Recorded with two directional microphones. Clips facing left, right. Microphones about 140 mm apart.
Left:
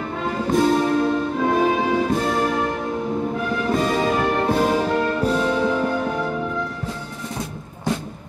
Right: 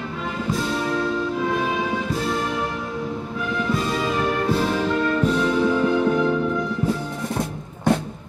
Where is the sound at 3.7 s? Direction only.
50° left (ahead or behind).